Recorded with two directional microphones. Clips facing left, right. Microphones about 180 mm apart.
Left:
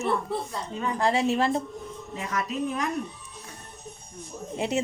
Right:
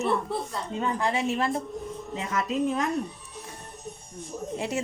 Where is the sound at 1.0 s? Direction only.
35° left (ahead or behind).